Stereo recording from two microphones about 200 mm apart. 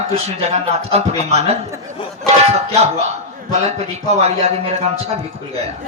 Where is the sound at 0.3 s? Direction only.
35° right (ahead or behind).